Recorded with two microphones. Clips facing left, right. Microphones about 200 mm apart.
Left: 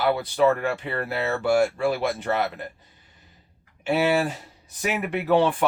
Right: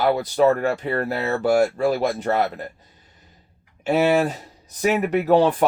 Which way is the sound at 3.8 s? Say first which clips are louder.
Right 4 dB; 40° right (ahead or behind).